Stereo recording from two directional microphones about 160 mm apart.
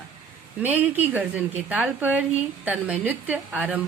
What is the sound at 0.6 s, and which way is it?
A woman's voice, 10° right (ahead or behind).